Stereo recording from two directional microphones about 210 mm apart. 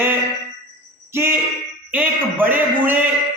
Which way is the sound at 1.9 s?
10° right (ahead or behind).